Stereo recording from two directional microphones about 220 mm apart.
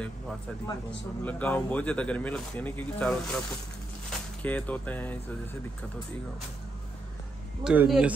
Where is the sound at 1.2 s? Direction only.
5° left (ahead or behind).